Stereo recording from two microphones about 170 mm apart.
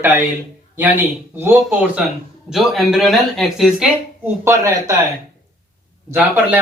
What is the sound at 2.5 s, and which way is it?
Speech, centre (ahead or behind).